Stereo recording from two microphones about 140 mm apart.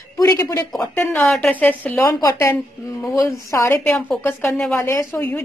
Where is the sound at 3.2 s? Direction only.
20° left (ahead or behind).